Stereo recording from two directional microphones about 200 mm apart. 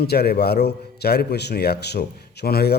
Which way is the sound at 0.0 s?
50° left (ahead or behind).